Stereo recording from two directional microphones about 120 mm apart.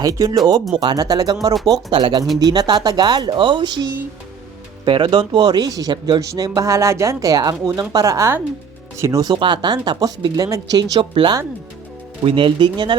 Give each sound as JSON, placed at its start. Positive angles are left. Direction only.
{"t": 0.0, "sound": "speech", "side_deg": -30}
{"t": 4.9, "sound": "speech", "side_deg": -40}
{"t": 9.3, "sound": "speech", "side_deg": -40}
{"t": 11.1, "sound": "speech", "side_deg": -45}